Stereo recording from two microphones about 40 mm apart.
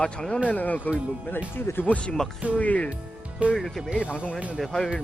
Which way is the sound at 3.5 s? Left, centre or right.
Centre.